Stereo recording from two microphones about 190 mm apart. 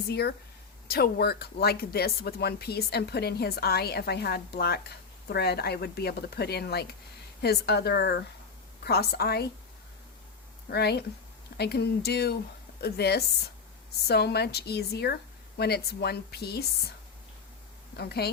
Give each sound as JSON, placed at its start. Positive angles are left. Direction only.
{"t": 0.1, "sound": "speech", "side_deg": 60}
{"t": 10.7, "sound": "speech", "side_deg": 55}
{"t": 17.9, "sound": "speech", "side_deg": 60}